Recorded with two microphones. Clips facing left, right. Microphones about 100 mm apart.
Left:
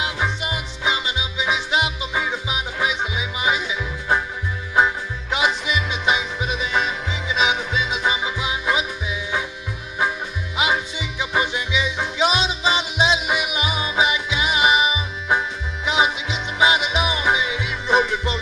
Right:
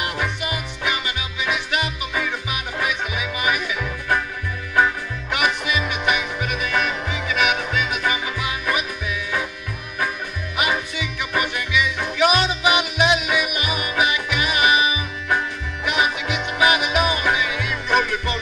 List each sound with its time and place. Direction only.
0.0 s music: 20° left (ahead or behind)
4.7 s music: 20° left (ahead or behind)
10.6 s music: 20° left (ahead or behind)